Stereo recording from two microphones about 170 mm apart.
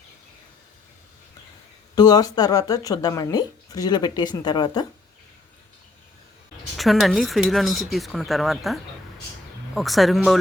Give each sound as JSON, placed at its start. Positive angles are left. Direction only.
{"t": 2.0, "sound": "speech", "side_deg": 25}
{"t": 6.7, "sound": "speech", "side_deg": 0}